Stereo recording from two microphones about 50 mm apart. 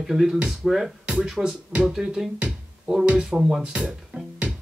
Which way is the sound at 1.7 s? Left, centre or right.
Right.